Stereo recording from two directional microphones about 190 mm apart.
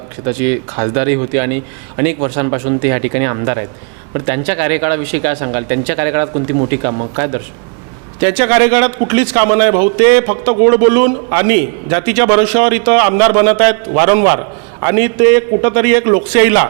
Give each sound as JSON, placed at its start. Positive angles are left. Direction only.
{"t": 0.8, "sound": "a man's voice", "side_deg": -15}
{"t": 6.3, "sound": "speech", "side_deg": -25}
{"t": 8.2, "sound": "a man's voice", "side_deg": -10}